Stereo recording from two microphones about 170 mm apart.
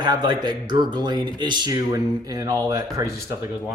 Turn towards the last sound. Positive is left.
turn(degrees=-20)  # may be behind; listen again after turning